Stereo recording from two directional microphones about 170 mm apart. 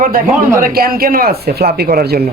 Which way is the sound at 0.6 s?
60° right (ahead or behind).